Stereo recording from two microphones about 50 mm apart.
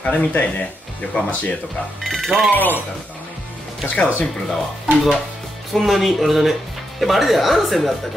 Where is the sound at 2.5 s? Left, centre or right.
Left.